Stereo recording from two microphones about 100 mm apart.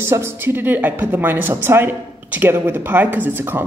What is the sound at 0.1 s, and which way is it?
A woman's voice, 25° right (ahead or behind).